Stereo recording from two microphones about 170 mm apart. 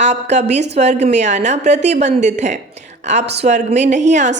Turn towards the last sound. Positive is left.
turn(degrees=-45)  # may be behind; listen again after turning